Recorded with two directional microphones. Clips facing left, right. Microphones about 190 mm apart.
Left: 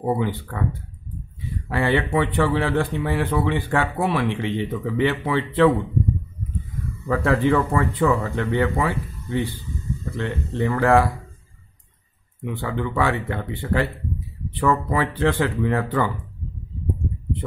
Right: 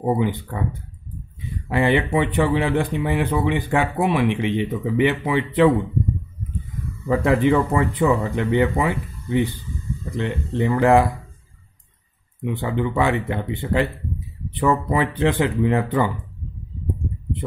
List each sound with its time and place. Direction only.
0.0 s a man's voice: 15° right (ahead or behind)
1.7 s a man's voice: 15° right (ahead or behind)
7.1 s a man's voice: 15° right (ahead or behind)
12.4 s a man's voice: 20° right (ahead or behind)